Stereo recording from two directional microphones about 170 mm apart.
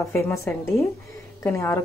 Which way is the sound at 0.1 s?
15° left (ahead or behind).